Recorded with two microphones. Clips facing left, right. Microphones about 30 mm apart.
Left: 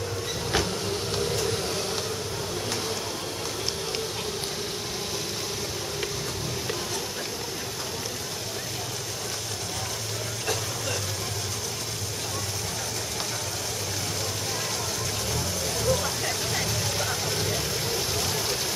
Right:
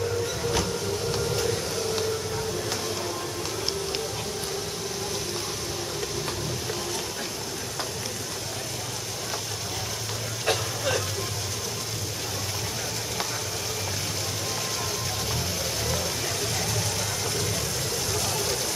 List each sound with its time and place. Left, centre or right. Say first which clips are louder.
10.4 s vehicle: right 5 dB; right
15.3 s music: even; centre
16.5 s vehicle: left 1 dB; centre